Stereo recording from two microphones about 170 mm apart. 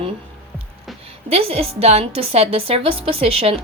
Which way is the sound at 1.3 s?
35° right (ahead or behind).